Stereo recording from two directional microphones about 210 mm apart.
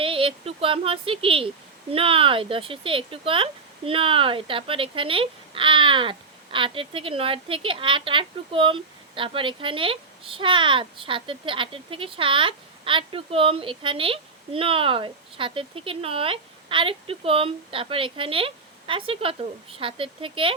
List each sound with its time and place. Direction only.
0.0 s speech: 25° right (ahead or behind)